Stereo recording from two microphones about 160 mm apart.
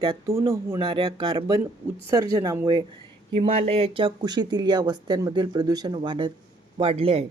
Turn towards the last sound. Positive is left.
turn(degrees=-35)  # may be behind; listen again after turning